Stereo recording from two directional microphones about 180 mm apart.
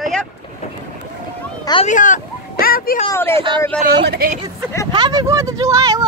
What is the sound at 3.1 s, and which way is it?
Speech, 15° left (ahead or behind).